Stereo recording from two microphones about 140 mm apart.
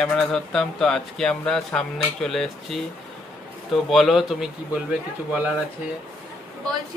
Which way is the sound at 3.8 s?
Centre (ahead or behind).